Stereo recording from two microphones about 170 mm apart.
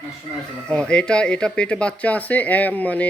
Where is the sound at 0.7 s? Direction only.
5° left (ahead or behind).